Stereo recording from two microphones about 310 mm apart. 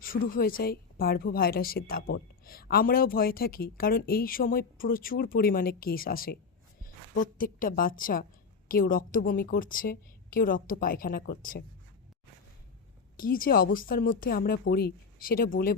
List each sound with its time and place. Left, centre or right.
0.0 s a woman's voice: left
13.1 s a woman's voice: left